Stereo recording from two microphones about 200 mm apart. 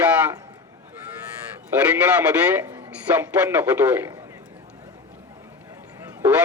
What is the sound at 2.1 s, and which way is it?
Speech, 10° right (ahead or behind).